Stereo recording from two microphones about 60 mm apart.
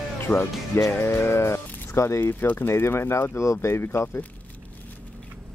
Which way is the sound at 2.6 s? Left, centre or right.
Left.